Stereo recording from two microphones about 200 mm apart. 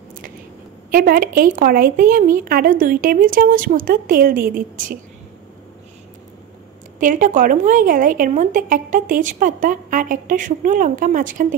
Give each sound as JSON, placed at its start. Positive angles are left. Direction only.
{"t": 0.9, "sound": "a woman's voice", "side_deg": -45}
{"t": 7.0, "sound": "a woman's voice", "side_deg": -40}